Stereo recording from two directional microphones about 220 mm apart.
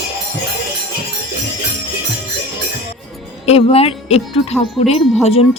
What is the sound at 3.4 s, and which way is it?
Speech, 25° left (ahead or behind).